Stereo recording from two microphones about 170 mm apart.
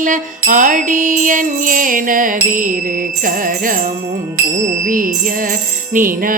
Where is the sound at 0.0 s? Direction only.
50° right (ahead or behind).